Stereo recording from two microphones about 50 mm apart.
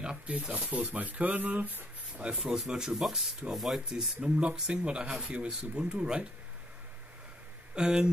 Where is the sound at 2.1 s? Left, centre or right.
Centre.